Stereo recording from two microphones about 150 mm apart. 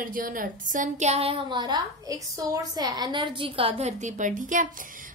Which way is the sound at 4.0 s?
55° right (ahead or behind).